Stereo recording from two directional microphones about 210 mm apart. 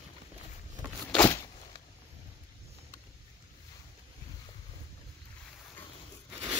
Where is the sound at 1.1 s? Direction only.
10° left (ahead or behind).